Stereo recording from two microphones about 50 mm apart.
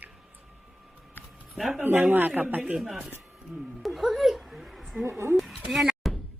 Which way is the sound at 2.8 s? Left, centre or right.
Centre.